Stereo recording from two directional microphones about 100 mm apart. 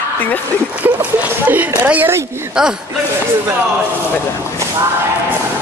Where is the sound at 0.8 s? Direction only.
15° right (ahead or behind).